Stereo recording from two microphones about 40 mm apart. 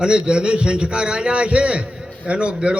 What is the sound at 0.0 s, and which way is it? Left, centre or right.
A man's voice, right.